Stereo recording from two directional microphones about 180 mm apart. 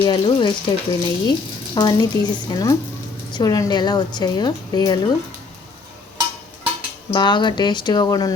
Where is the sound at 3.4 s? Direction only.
20° left (ahead or behind).